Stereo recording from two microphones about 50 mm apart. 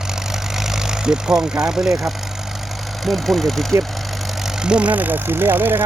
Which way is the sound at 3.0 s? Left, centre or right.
Centre.